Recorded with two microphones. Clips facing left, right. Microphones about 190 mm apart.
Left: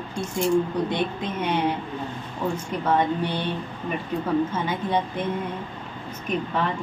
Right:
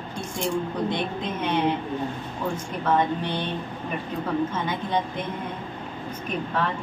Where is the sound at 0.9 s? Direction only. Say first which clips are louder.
Left 2 dB; 10° left (ahead or behind).